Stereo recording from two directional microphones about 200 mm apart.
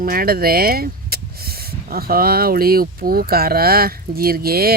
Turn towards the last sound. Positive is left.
turn(degrees=-50)  # may be behind; listen again after turning